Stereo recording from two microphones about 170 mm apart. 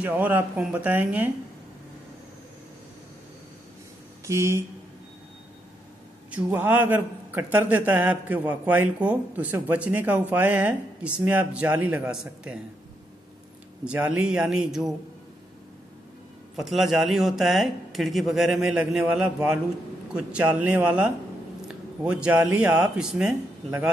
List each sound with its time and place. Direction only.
0.0 s a man's voice: 10° right (ahead or behind)
4.3 s a man's voice: 15° right (ahead or behind)
6.3 s a man's voice: 10° right (ahead or behind)
13.8 s speech: 5° right (ahead or behind)
16.5 s a man's voice: centre (ahead or behind)